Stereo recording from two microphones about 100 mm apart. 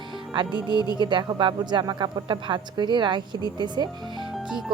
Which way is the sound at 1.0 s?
50° right (ahead or behind).